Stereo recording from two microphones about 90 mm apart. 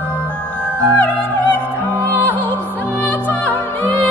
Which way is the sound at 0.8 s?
15° left (ahead or behind).